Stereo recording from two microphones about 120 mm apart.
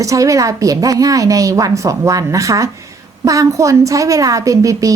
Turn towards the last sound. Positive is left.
turn(degrees=-30)  # may be behind; listen again after turning